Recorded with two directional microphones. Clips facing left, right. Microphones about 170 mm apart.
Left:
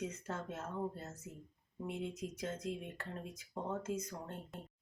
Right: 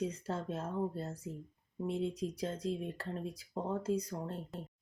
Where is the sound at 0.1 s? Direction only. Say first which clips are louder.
Right 5 dB; 30° right (ahead or behind).